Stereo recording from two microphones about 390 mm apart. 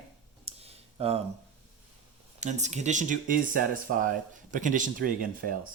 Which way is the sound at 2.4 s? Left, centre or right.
Centre.